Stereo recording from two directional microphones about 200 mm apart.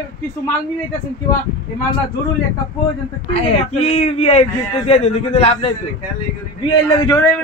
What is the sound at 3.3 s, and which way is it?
Speech, 30° left (ahead or behind).